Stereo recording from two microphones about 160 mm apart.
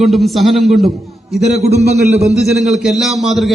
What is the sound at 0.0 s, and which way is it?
A man's voice, centre (ahead or behind).